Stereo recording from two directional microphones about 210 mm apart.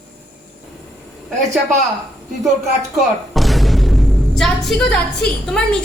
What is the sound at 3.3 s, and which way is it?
A woman's voice, centre (ahead or behind).